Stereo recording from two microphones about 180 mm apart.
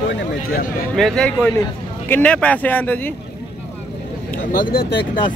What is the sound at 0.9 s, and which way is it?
A man's voice, 5° left (ahead or behind).